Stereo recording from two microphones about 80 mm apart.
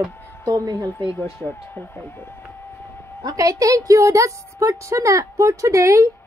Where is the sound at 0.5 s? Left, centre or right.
Right.